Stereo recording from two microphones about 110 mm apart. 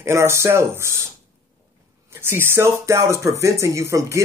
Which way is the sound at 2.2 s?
20° right (ahead or behind).